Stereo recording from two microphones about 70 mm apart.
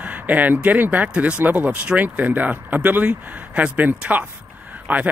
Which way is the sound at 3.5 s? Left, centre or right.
Centre.